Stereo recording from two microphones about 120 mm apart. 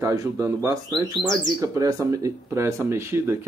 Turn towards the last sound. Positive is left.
turn(degrees=-20)  # may be behind; listen again after turning